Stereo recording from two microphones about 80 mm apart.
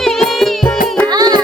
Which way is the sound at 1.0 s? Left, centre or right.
Right.